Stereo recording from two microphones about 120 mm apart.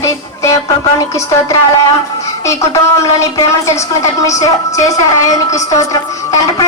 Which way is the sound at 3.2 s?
25° left (ahead or behind).